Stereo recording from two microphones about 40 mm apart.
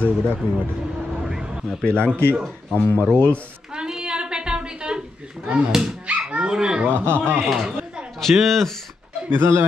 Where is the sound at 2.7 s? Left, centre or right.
Left.